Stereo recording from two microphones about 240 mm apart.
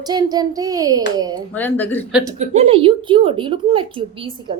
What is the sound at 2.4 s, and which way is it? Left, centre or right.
A woman's voice, right.